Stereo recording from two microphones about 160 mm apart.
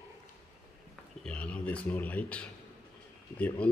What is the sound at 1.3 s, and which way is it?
Speech, 5° left (ahead or behind).